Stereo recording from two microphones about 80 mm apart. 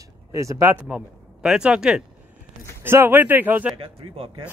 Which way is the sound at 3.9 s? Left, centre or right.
Right.